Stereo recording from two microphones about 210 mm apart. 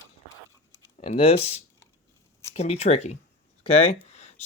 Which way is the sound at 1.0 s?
30° left (ahead or behind).